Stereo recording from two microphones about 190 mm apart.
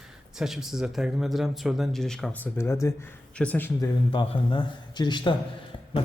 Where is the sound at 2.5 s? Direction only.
15° left (ahead or behind).